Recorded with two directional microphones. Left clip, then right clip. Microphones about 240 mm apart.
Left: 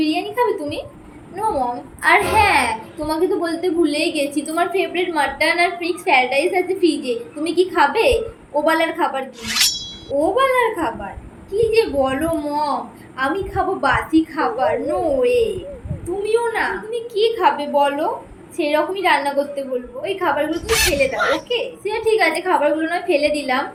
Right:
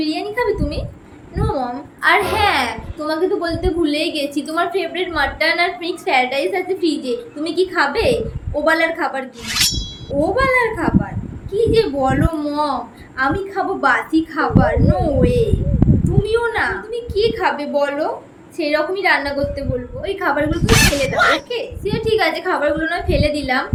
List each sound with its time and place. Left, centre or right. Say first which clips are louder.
0.0 s a sound: left 1 dB; centre
1.4 s a woman's voice: left 2 dB; centre
20.5 s speech: right 3 dB; centre
21.5 s a woman's voice: left 1 dB; centre